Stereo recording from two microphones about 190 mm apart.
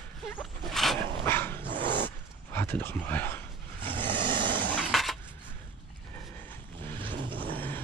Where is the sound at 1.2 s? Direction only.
10° left (ahead or behind).